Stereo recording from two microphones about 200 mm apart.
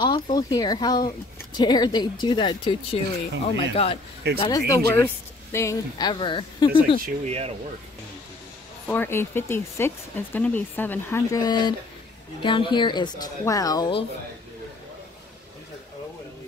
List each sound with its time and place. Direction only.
0.0 s speech: 20° left (ahead or behind)
4.4 s speech: 15° left (ahead or behind)
7.2 s speech: 30° right (ahead or behind)
8.8 s speech: 10° left (ahead or behind)